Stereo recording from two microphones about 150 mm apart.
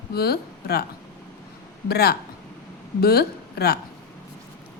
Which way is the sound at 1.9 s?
90° left.